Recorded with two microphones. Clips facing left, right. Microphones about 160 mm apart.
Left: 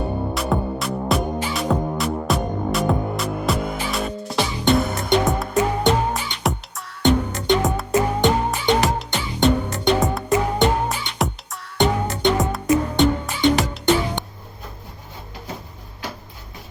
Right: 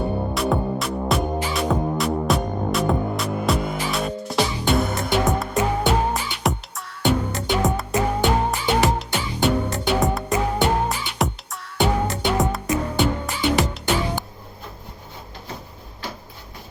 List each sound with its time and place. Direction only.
0.3 s music: centre (ahead or behind)